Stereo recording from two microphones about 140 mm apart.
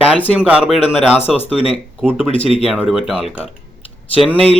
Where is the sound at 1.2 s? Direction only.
45° left (ahead or behind).